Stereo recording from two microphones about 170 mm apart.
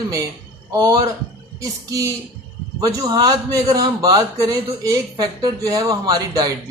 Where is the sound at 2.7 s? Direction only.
20° right (ahead or behind).